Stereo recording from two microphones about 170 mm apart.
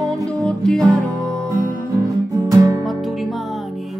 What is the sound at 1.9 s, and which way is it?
Music, 20° right (ahead or behind).